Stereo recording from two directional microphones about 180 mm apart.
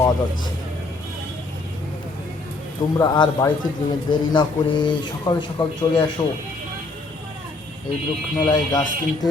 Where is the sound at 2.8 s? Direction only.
25° left (ahead or behind).